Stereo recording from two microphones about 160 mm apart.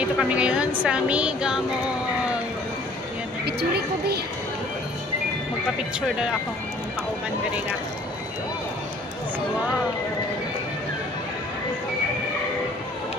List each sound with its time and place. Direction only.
0.2 s a woman's voice: 5° right (ahead or behind)
3.4 s a woman's voice: 85° right